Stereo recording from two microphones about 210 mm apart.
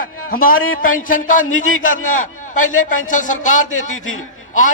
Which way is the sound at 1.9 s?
75° left (ahead or behind).